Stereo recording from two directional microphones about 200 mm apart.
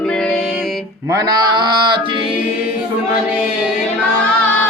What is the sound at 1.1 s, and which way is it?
Music, 15° right (ahead or behind).